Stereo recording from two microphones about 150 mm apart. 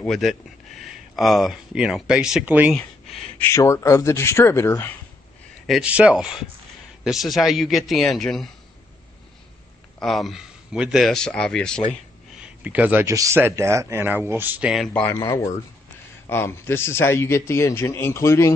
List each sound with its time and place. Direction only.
0.0 s speech: centre (ahead or behind)
3.3 s speech: 20° left (ahead or behind)
5.7 s speech: 5° right (ahead or behind)
9.9 s speech: centre (ahead or behind)
12.6 s speech: 10° right (ahead or behind)
14.9 s a man's voice: 10° left (ahead or behind)
15.1 s a man's voice: 20° left (ahead or behind)